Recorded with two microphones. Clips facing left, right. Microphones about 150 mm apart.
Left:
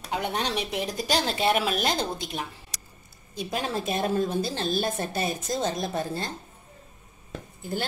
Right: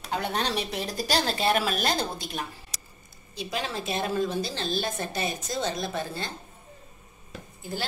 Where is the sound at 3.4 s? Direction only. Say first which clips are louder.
Left 3 dB; 45° left (ahead or behind).